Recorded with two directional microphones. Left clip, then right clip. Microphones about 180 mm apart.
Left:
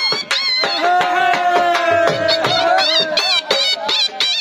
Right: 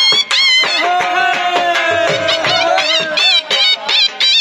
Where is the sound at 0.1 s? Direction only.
30° right (ahead or behind).